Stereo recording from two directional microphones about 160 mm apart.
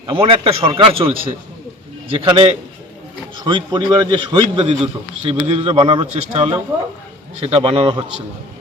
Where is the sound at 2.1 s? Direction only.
30° right (ahead or behind).